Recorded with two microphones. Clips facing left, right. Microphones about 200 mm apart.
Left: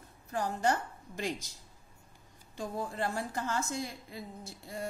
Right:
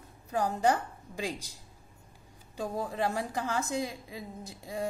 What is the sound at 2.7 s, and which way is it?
Speech, 15° right (ahead or behind).